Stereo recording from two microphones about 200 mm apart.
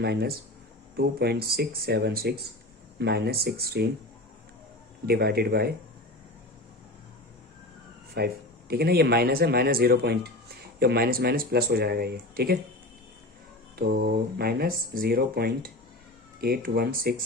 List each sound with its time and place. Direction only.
0.0 s speech: 55° right (ahead or behind)
5.0 s speech: 50° right (ahead or behind)
8.1 s speech: 50° right (ahead or behind)
13.7 s speech: 50° right (ahead or behind)